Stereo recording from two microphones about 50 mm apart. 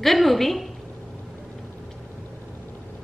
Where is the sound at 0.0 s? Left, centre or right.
Centre.